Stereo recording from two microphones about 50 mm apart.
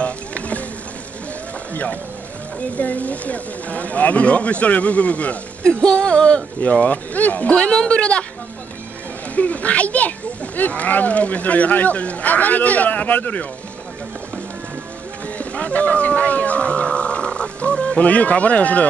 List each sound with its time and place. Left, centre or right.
0.0 s music: left
2.8 s speech: left
5.6 s speech: centre
7.5 s speech: centre
9.3 s speech: left
15.3 s speech: left